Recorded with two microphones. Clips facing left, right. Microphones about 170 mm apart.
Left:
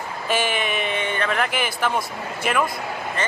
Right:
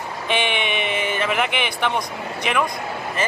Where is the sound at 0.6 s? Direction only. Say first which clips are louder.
Right 1 dB; 35° left (ahead or behind).